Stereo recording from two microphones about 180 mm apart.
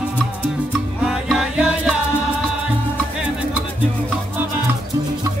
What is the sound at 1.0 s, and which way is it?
Music, 5° right (ahead or behind).